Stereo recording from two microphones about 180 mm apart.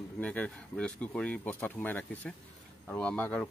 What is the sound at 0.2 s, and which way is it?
Speech, 10° left (ahead or behind).